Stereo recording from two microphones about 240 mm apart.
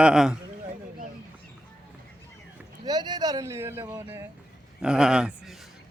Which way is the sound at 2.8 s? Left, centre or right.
Centre.